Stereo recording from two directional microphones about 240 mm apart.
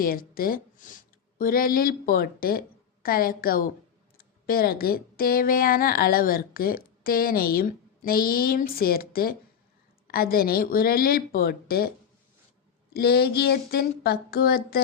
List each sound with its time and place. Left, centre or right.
0.0 s speech: left
12.9 s speech: left